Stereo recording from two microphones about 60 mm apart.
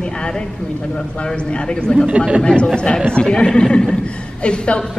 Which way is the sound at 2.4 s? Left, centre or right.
Centre.